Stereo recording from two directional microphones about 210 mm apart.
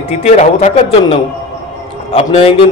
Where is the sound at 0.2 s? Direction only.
35° left (ahead or behind).